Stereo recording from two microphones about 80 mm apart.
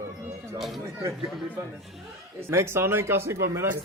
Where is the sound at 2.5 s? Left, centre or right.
Right.